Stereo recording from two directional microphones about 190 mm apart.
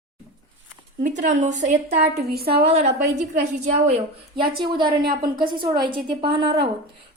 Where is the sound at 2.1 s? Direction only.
55° right (ahead or behind).